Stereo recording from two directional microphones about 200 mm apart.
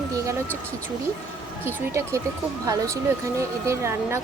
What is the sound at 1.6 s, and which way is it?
Speech, 15° right (ahead or behind).